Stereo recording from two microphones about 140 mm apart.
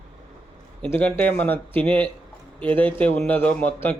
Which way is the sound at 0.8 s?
10° left (ahead or behind).